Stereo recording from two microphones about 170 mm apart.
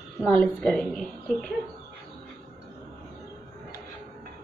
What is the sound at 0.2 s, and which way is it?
Speech, 5° left (ahead or behind).